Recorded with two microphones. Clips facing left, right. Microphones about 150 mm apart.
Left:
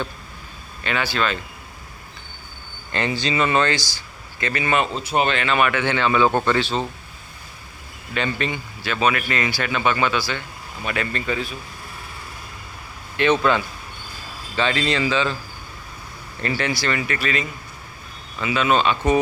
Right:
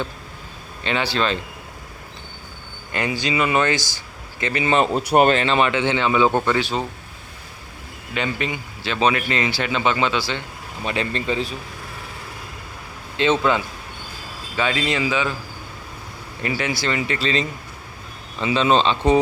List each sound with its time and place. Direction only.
0.9 s a man's voice: 30° right (ahead or behind)
2.9 s speech: 15° right (ahead or behind)
4.8 s speech: 40° right (ahead or behind)
5.4 s speech: 30° right (ahead or behind)
8.1 s speech: 15° right (ahead or behind)
8.8 s a man's voice: 25° right (ahead or behind)
13.1 s a man's voice: 20° right (ahead or behind)
16.4 s a man's voice: 15° right (ahead or behind)